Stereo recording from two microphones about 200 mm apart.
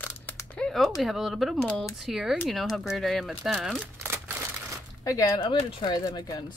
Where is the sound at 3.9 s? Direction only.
15° right (ahead or behind).